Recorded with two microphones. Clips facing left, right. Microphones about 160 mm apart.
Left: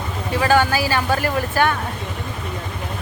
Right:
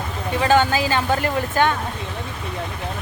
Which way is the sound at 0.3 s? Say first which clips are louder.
Even; 20° right (ahead or behind).